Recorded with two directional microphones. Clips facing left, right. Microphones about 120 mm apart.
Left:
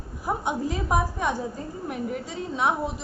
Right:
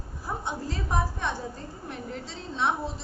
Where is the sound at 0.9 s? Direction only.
10° left (ahead or behind).